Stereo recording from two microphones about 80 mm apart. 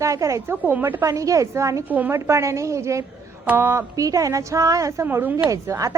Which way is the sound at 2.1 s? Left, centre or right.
Right.